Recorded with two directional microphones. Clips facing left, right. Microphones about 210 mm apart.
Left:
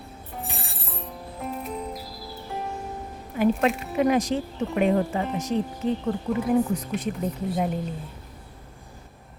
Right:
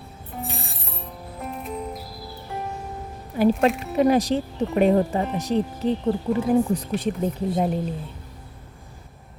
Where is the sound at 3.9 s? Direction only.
35° right (ahead or behind).